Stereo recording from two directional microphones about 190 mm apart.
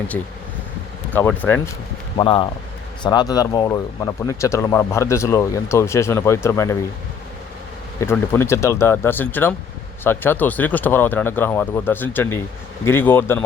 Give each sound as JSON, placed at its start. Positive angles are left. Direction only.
{"t": 1.1, "sound": "speech", "side_deg": 10}
{"t": 2.1, "sound": "speech", "side_deg": 25}
{"t": 7.9, "sound": "speech", "side_deg": 10}